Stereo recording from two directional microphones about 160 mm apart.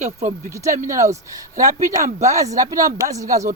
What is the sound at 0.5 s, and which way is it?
Speech, 20° right (ahead or behind).